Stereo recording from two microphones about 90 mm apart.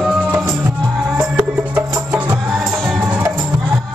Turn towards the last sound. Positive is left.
turn(degrees=-15)  # may be behind; listen again after turning